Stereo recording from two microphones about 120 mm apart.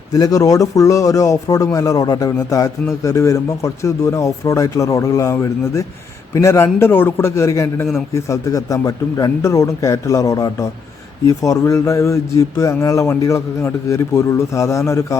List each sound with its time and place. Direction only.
0.1 s speech: 30° left (ahead or behind)